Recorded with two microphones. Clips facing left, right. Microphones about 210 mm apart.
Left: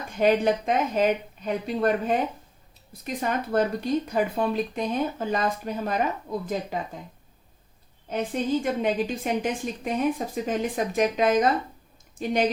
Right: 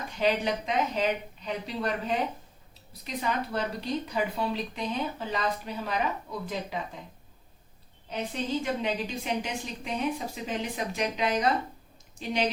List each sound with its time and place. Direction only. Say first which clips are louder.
0.2 s a woman's voice: left 6 dB; 50° left (ahead or behind)
8.1 s a woman's voice: left 5 dB; 50° left (ahead or behind)